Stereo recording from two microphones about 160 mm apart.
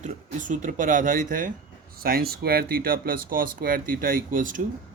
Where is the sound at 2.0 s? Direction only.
75° right (ahead or behind).